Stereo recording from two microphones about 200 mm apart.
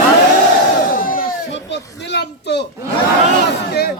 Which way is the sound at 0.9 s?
45° left (ahead or behind).